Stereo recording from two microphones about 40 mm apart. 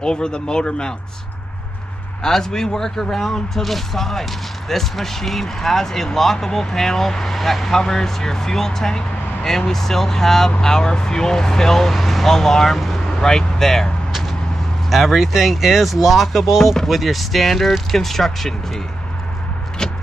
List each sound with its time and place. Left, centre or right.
0.0 s speech: centre
2.2 s speech: centre
14.9 s speech: centre
19.8 s a sound: centre